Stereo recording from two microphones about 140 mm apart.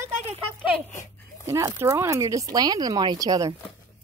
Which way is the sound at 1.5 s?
20° right (ahead or behind).